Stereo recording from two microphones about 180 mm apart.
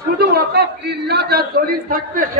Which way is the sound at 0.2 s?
65° right (ahead or behind).